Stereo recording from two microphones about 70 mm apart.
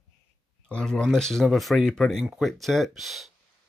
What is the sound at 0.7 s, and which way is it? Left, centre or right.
Speech, centre.